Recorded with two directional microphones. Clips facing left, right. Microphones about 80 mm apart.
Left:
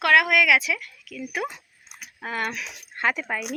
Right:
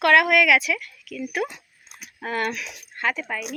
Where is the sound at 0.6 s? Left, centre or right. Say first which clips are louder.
Right 2 dB; left.